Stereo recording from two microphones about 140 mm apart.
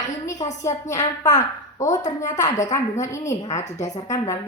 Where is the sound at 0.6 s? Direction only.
20° left (ahead or behind).